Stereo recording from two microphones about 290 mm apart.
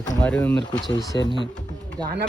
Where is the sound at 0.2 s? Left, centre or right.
Centre.